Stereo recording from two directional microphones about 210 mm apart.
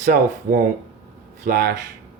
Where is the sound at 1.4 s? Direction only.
40° right (ahead or behind).